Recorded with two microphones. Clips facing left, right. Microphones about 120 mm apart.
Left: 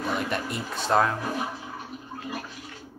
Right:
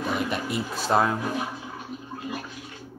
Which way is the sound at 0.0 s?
5° right (ahead or behind).